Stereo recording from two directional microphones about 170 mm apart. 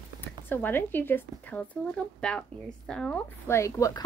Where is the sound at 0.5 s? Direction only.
10° left (ahead or behind).